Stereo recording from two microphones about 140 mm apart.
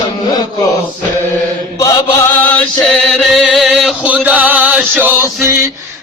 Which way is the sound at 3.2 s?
Centre (ahead or behind).